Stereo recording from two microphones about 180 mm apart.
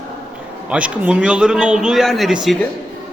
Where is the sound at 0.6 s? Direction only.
5° right (ahead or behind).